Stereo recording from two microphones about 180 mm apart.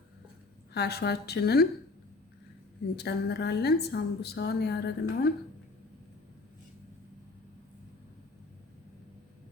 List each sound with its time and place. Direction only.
0.7 s a woman's voice: 65° left (ahead or behind)
2.9 s a woman's voice: 65° left (ahead or behind)